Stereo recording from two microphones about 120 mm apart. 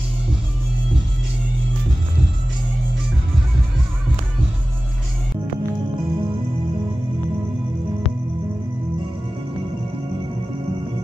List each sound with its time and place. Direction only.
5.9 s music: 45° right (ahead or behind)